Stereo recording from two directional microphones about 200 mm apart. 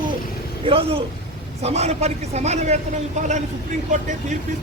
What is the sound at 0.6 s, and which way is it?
A man's voice, 30° right (ahead or behind).